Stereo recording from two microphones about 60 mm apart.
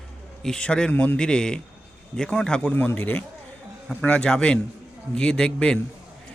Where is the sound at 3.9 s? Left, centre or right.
Centre.